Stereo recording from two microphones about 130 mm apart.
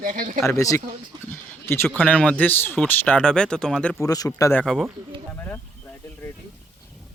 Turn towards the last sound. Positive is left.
turn(degrees=15)  # may be behind; listen again after turning